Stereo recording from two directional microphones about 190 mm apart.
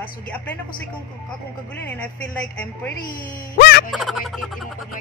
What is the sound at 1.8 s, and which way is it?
A woman's voice, 10° left (ahead or behind).